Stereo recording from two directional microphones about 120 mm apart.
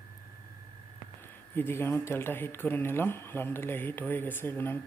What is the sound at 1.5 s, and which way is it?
Speech, 20° left (ahead or behind).